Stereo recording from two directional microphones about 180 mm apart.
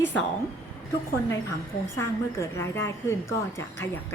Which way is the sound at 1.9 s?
15° left (ahead or behind).